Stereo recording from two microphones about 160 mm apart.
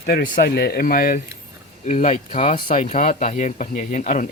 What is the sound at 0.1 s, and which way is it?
Speech, 75° left (ahead or behind).